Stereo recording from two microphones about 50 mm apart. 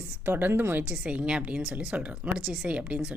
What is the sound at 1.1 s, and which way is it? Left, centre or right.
A woman's voice, right.